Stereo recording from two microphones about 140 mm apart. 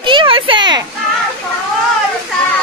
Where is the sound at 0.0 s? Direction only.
35° right (ahead or behind).